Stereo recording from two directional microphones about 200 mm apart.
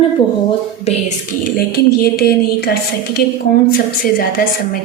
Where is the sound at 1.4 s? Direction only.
50° left (ahead or behind).